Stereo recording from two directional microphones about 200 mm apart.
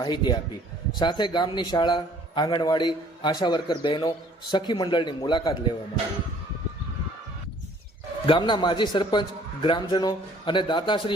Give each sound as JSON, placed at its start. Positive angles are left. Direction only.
{"t": 0.0, "sound": "a man's voice", "side_deg": 20}
{"t": 8.3, "sound": "a man's voice", "side_deg": 20}